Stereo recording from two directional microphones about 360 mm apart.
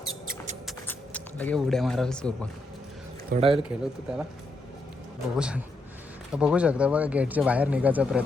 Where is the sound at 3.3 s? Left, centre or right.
Centre.